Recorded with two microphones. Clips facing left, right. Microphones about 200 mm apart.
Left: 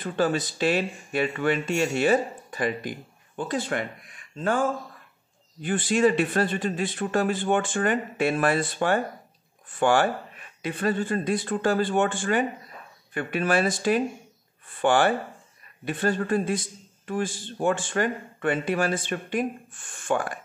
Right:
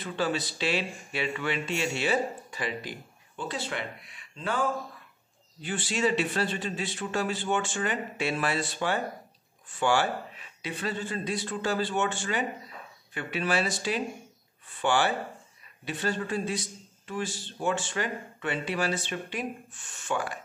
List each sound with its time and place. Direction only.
0.0 s speech: 50° left (ahead or behind)